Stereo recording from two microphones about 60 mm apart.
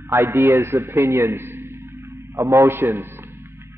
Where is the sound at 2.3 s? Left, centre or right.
Right.